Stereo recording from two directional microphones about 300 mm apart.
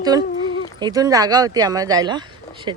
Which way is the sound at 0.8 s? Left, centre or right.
Centre.